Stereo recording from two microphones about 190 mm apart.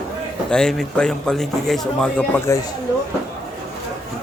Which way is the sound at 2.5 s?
15° left (ahead or behind).